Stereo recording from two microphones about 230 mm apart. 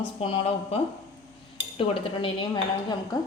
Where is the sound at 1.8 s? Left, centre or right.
Left.